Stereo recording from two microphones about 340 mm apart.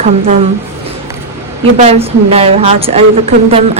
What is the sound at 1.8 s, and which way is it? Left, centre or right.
A woman's voice, centre.